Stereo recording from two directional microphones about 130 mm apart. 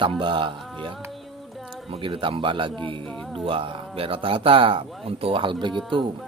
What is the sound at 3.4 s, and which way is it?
Speech, 40° right (ahead or behind).